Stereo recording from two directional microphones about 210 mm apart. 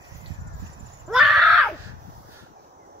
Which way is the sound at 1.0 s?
Centre (ahead or behind).